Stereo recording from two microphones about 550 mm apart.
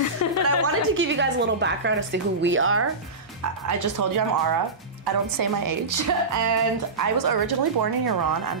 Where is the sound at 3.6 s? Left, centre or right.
Right.